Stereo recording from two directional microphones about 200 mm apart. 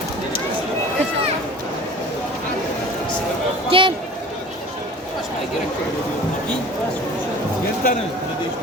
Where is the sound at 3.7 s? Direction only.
25° right (ahead or behind).